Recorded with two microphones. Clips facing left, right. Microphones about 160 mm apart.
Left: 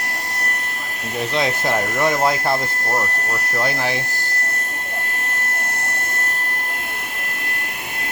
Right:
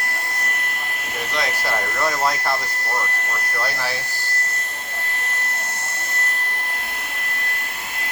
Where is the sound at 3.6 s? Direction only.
20° left (ahead or behind).